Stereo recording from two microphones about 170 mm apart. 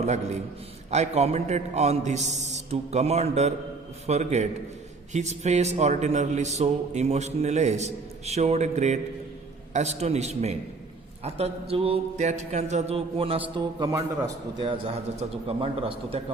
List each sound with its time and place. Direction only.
0.9 s a man's voice: 40° right (ahead or behind)
13.6 s a man's voice: 25° right (ahead or behind)
15.4 s a man's voice: 35° right (ahead or behind)